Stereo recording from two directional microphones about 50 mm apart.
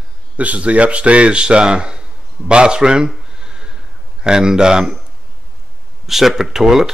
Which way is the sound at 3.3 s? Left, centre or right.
Centre.